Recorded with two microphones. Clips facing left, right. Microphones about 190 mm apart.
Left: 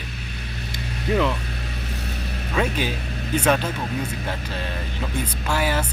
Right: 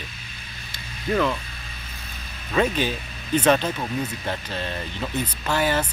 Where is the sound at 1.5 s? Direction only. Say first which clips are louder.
Left 10 dB; 70° left (ahead or behind).